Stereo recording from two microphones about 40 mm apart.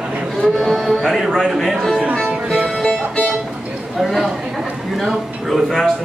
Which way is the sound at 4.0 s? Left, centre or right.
Centre.